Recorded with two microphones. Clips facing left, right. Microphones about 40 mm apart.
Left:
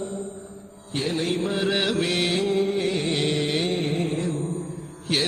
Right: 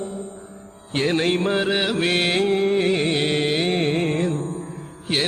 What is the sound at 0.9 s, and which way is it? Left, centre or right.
Music, right.